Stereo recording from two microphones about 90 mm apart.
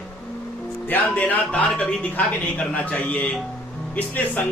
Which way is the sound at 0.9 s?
20° left (ahead or behind).